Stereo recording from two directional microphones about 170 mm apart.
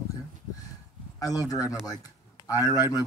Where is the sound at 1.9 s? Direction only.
20° left (ahead or behind).